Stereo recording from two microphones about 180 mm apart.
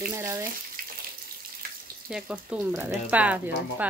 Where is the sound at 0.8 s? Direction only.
50° right (ahead or behind).